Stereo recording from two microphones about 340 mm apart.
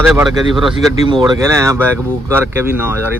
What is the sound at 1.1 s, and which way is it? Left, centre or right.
Speech, centre.